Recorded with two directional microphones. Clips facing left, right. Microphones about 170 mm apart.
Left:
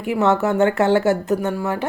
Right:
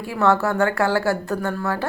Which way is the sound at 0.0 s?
20° left (ahead or behind).